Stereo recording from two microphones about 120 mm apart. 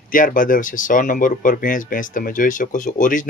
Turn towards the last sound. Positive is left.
turn(degrees=90)